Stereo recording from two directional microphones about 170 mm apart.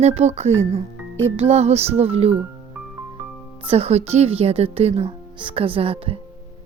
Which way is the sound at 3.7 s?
35° right (ahead or behind).